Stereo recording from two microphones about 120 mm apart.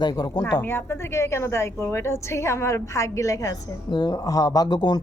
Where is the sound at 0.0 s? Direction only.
35° left (ahead or behind).